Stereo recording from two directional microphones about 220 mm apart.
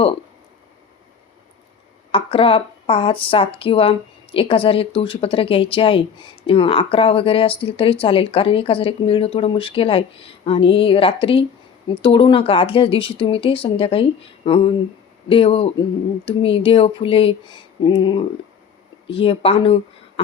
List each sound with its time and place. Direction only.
2.1 s speech: 25° left (ahead or behind)